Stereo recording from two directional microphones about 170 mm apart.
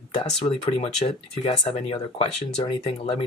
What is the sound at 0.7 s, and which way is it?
Speech, 40° left (ahead or behind).